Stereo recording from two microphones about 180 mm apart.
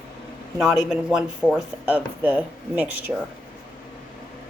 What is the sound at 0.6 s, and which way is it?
A man's voice, centre (ahead or behind).